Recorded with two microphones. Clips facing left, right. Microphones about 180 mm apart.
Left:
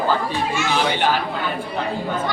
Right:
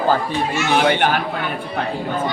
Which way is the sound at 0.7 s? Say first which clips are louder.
Right 4 dB; 60° right (ahead or behind).